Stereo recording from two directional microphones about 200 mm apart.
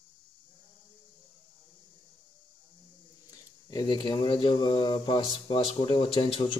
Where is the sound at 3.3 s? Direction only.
20° left (ahead or behind).